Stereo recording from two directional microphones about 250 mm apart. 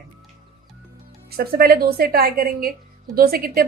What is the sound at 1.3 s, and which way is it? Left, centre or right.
A woman's voice, right.